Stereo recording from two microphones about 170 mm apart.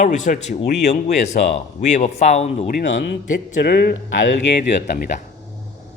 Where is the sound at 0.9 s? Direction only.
45° left (ahead or behind).